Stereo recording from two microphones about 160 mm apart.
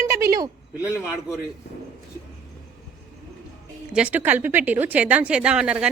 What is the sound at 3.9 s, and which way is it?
Speech, 10° right (ahead or behind).